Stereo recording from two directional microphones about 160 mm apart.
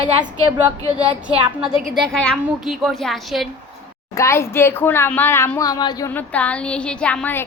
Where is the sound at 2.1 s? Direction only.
5° left (ahead or behind).